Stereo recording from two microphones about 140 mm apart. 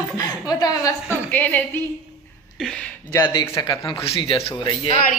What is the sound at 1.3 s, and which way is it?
A woman's voice, 10° left (ahead or behind).